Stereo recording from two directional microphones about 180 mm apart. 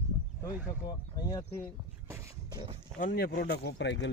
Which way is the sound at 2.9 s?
50° left (ahead or behind).